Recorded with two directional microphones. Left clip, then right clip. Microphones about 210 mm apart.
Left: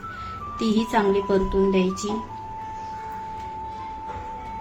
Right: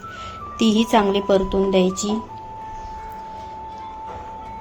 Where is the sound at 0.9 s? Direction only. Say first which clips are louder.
Right 3 dB; 35° right (ahead or behind).